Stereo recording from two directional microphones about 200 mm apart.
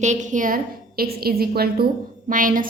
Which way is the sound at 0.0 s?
35° right (ahead or behind).